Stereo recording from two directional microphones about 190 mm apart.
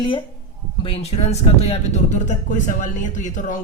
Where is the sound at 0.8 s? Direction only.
30° left (ahead or behind).